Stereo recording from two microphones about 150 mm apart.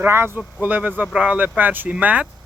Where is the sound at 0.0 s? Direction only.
15° right (ahead or behind).